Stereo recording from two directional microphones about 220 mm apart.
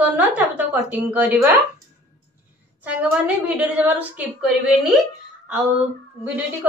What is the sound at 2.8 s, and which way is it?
A woman's voice, 5° right (ahead or behind).